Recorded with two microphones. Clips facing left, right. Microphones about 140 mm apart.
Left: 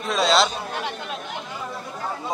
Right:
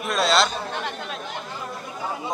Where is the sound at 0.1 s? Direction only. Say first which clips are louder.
Left 1 dB; centre (ahead or behind).